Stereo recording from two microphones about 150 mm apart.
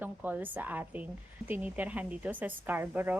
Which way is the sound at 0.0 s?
10° right (ahead or behind).